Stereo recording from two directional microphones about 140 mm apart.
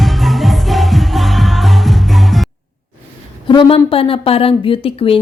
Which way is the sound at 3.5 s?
40° left (ahead or behind).